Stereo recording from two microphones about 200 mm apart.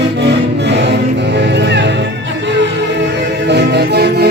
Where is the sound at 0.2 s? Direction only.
60° right (ahead or behind).